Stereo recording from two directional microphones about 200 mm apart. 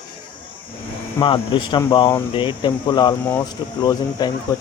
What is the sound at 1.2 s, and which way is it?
Speech, 25° left (ahead or behind).